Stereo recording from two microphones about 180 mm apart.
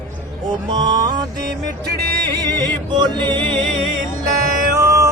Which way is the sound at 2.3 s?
20° right (ahead or behind).